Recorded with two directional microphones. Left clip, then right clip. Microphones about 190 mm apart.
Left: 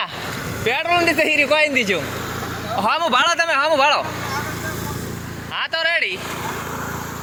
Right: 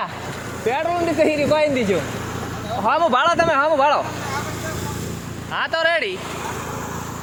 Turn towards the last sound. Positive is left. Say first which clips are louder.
# even
turn(degrees=-20)  # may be behind; listen again after turning